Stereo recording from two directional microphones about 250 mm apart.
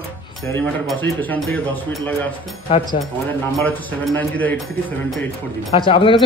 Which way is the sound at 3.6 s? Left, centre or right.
Centre.